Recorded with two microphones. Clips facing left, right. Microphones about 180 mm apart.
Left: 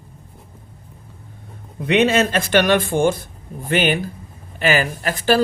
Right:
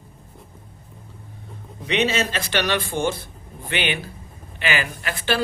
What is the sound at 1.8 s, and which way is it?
Speech, 55° left (ahead or behind).